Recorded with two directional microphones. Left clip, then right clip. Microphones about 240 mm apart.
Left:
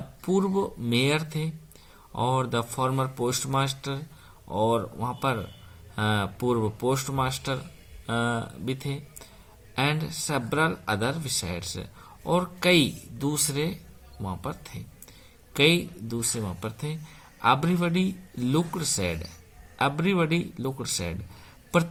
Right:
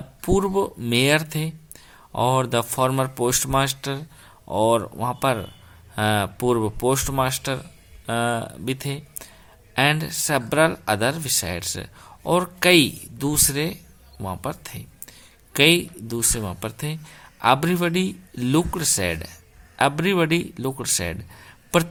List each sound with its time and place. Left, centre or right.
0.2 s speech: right